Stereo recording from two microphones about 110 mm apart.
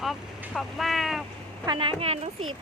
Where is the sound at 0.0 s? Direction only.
Centre (ahead or behind).